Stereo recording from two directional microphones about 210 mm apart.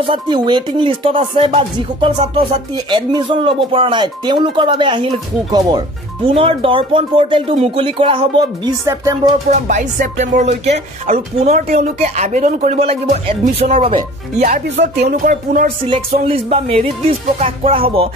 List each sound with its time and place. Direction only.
0.0 s speech: 25° right (ahead or behind)
9.5 s speech: 35° right (ahead or behind)
10.7 s speech: 45° right (ahead or behind)
14.4 s speech: 45° right (ahead or behind)
16.3 s speech: 25° right (ahead or behind)